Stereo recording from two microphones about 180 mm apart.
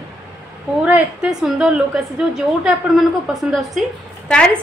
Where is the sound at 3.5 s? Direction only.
Centre (ahead or behind).